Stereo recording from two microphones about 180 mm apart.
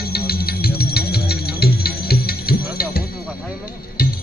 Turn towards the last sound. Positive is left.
turn(degrees=55)  # may be behind; listen again after turning